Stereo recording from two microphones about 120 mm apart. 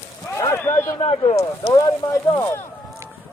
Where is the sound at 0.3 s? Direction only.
25° left (ahead or behind).